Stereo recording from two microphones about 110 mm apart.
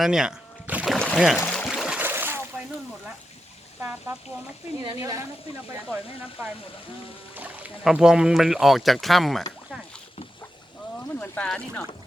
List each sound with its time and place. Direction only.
0.0 s a sound: 5° right (ahead or behind)
0.9 s a sound: 5° left (ahead or behind)
1.1 s speech: 5° right (ahead or behind)
1.5 s pour: 5° left (ahead or behind)
1.7 s splash: 5° right (ahead or behind)
2.0 s splash: 20° right (ahead or behind)
4.9 s speech: 30° right (ahead or behind)
7.3 s speech: 15° right (ahead or behind); by 9.4 s centre (ahead or behind)
11.1 s boat: 20° left (ahead or behind)
11.4 s speech: 5° left (ahead or behind)